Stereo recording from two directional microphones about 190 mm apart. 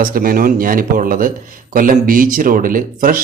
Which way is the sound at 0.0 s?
50° right (ahead or behind).